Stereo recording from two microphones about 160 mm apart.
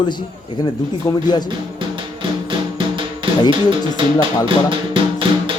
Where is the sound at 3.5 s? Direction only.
30° right (ahead or behind).